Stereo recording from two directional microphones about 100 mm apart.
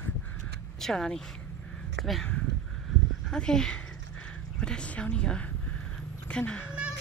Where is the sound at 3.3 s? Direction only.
5° left (ahead or behind).